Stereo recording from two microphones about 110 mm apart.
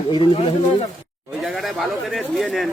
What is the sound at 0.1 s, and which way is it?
Speech, 50° left (ahead or behind).